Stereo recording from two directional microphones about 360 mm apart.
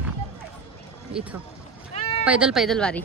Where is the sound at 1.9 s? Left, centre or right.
Centre.